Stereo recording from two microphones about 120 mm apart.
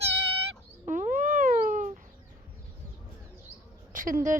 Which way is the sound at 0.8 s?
90° right.